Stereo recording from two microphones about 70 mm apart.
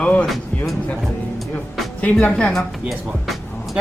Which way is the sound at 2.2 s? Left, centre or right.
Centre.